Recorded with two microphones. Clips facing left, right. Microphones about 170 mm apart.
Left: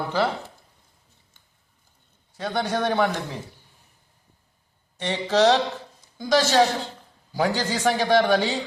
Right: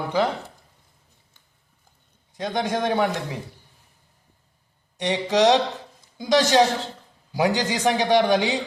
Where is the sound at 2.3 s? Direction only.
15° right (ahead or behind).